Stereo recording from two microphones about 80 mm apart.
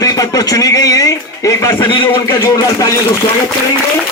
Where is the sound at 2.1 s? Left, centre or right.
Left.